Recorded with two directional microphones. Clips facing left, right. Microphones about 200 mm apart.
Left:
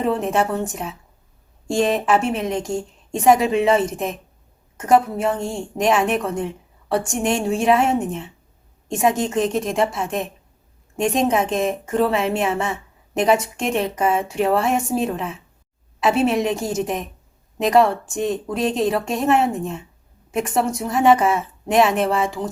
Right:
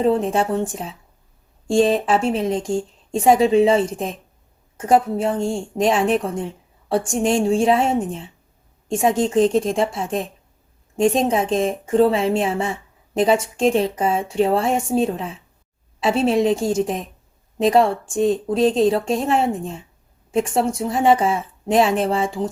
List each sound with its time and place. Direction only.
0.0 s a woman's voice: 30° right (ahead or behind)